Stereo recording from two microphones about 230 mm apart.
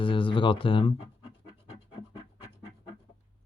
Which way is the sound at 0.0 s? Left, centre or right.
Left.